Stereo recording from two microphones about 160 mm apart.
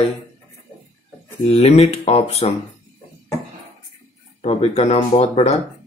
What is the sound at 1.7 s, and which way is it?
Speech, 40° left (ahead or behind).